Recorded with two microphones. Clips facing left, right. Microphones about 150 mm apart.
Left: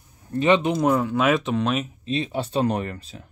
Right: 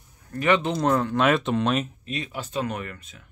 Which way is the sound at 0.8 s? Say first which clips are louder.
Left 1 dB; 10° left (ahead or behind).